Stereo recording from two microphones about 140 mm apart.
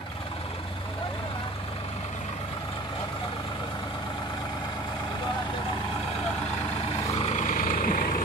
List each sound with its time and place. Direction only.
7.2 s vehicle: 55° left (ahead or behind); by 8.2 s 90° left